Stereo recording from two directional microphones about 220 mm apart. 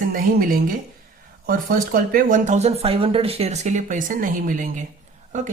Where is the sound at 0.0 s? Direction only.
40° right (ahead or behind).